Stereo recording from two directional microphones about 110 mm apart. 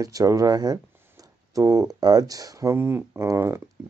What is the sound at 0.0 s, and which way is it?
Speech, 30° right (ahead or behind).